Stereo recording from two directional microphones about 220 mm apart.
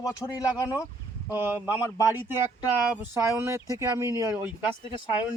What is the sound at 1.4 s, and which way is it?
Speech, 10° right (ahead or behind).